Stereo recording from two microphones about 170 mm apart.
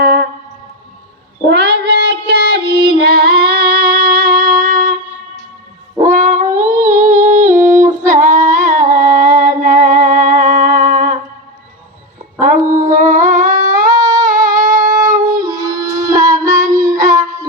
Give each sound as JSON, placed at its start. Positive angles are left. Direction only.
{"t": 0.0, "sound": "music", "side_deg": -60}
{"t": 1.5, "sound": "female singing", "side_deg": -75}
{"t": 6.0, "sound": "music", "side_deg": -45}
{"t": 7.9, "sound": "female singing", "side_deg": -45}
{"t": 12.4, "sound": "humming", "side_deg": -50}
{"t": 13.9, "sound": "humming", "side_deg": -25}
{"t": 14.5, "sound": "wind instrument", "side_deg": -50}
{"t": 14.9, "sound": "a sound", "side_deg": -20}
{"t": 16.2, "sound": "music", "side_deg": -20}
{"t": 16.5, "sound": "child singing", "side_deg": -50}
{"t": 16.7, "sound": "music", "side_deg": -20}